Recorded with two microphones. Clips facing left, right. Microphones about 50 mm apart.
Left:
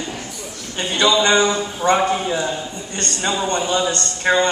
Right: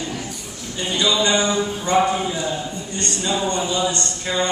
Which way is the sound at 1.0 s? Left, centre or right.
Left.